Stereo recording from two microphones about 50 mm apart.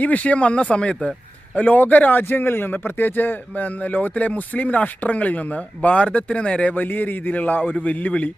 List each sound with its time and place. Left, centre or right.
0.0 s a man's voice: left
2.2 s speech: left
6.7 s speech: left